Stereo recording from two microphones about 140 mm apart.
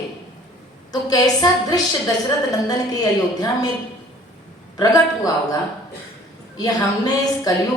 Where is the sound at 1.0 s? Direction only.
25° left (ahead or behind).